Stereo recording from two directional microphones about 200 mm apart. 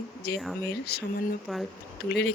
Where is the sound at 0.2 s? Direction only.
55° left (ahead or behind).